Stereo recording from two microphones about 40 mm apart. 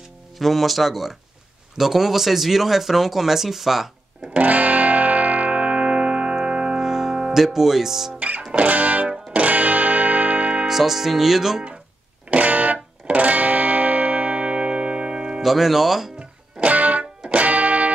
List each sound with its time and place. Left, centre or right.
0.4 s speech: centre
4.4 s music: right
6.8 s music: centre
7.3 s speech: centre
8.4 s music: right
10.7 s speech: centre
12.3 s music: right
15.4 s speech: centre
16.2 s music: right
16.7 s music: right